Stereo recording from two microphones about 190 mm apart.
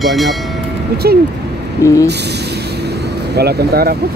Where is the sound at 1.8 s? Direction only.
15° left (ahead or behind).